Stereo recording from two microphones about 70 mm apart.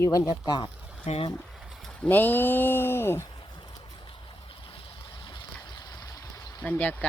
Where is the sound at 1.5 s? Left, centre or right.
Centre.